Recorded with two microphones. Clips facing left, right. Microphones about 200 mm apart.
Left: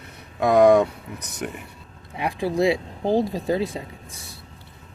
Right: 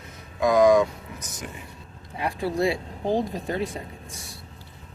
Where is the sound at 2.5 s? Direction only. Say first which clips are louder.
Left 6 dB; 20° left (ahead or behind).